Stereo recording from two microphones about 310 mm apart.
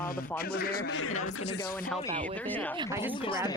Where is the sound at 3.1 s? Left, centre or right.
Centre.